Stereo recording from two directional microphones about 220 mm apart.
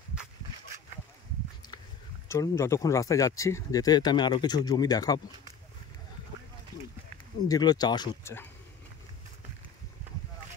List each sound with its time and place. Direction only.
2.2 s speech: 15° left (ahead or behind)
7.4 s speech: 15° left (ahead or behind)